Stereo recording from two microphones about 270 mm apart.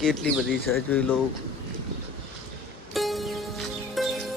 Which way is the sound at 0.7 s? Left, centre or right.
Centre.